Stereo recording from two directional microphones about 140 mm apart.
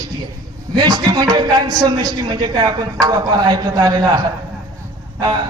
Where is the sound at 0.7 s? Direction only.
30° right (ahead or behind).